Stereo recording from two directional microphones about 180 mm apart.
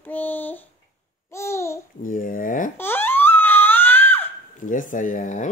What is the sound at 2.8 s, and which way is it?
Crying, 10° left (ahead or behind).